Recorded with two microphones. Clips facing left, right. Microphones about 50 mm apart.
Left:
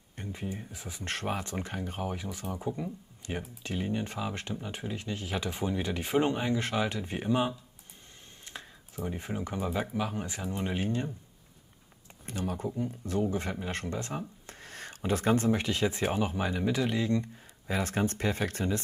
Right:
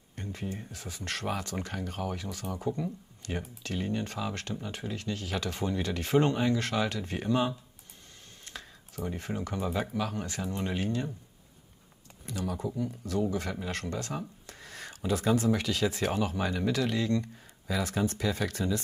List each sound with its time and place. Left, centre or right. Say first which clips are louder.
0.2 s speech: even; centre
8.5 s speech: even; centre
9.7 s speech: right 1 dB; centre
9.9 s speech: even; centre
12.3 s speech: even; left; by 17.3 s centre
17.6 s speech: even; left